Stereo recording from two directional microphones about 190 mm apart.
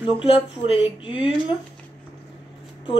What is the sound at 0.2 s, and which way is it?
Speech, 30° left (ahead or behind).